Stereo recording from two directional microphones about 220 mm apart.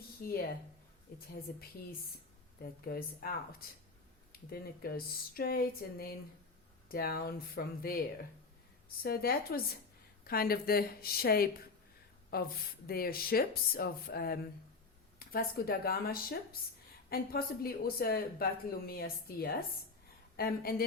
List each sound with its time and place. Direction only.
0.2 s a woman's voice: 45° left (ahead or behind)
2.8 s speech: 40° left (ahead or behind)
9.0 s speech: 45° left (ahead or behind)